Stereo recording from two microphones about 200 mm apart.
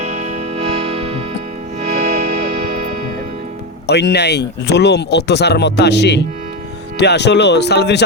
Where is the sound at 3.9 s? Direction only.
55° left (ahead or behind).